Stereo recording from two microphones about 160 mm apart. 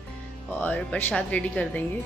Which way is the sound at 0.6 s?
10° left (ahead or behind).